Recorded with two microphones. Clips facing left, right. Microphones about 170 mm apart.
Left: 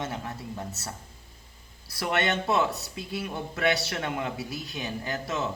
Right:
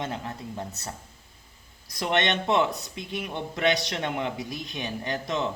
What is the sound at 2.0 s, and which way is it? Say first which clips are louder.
Speech: right 2 dB; 20° right (ahead or behind).